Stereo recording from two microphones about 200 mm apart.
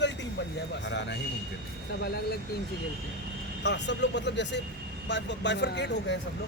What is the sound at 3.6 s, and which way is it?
Speech, 60° left (ahead or behind).